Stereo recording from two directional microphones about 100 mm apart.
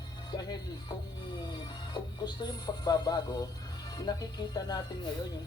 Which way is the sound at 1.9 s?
45° left (ahead or behind).